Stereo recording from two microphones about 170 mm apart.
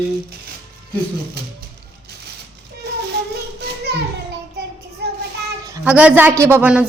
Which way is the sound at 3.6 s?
75° right (ahead or behind).